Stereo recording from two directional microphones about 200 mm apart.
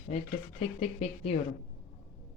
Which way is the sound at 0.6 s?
30° left (ahead or behind).